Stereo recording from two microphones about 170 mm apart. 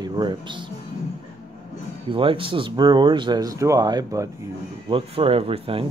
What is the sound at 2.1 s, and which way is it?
Speech, 30° right (ahead or behind).